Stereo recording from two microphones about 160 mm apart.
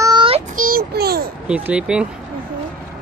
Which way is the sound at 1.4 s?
5° right (ahead or behind).